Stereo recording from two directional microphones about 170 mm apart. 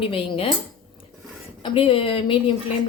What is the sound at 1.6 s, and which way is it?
Speech, 35° left (ahead or behind).